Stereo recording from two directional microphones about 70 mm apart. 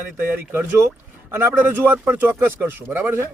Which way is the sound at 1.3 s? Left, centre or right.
Right.